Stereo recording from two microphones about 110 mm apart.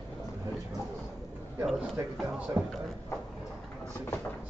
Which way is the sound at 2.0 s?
25° right (ahead or behind).